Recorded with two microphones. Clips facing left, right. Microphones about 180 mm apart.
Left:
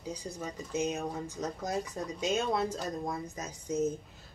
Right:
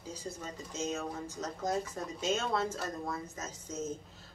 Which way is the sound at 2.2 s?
15° left (ahead or behind).